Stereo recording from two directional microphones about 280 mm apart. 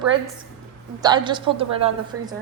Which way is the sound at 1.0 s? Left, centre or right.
Centre.